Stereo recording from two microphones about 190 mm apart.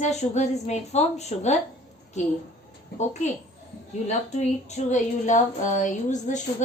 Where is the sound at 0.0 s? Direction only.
35° left (ahead or behind).